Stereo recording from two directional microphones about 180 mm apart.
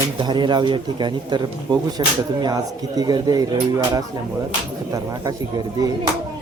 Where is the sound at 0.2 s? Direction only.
25° right (ahead or behind).